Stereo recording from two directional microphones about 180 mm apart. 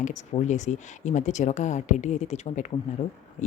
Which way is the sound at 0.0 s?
40° left (ahead or behind).